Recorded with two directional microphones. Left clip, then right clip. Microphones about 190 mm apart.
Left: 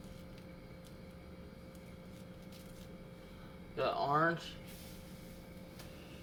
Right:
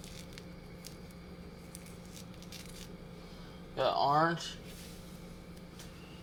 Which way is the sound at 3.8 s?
20° right (ahead or behind).